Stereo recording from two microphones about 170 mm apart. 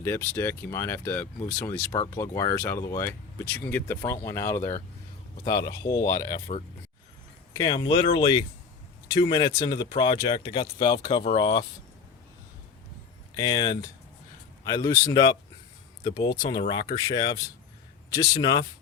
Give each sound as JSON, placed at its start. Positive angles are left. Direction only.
{"t": 0.0, "sound": "speech", "side_deg": 15}
{"t": 6.5, "sound": "speech", "side_deg": 45}
{"t": 7.5, "sound": "speech", "side_deg": 25}
{"t": 13.3, "sound": "speech", "side_deg": 25}